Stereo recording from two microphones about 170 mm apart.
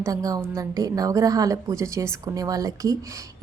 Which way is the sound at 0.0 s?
20° right (ahead or behind).